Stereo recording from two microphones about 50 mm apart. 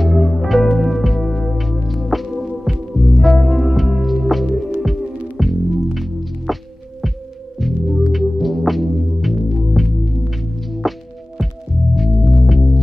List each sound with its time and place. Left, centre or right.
0.0 s music: centre
7.6 s music: centre
10.8 s music: centre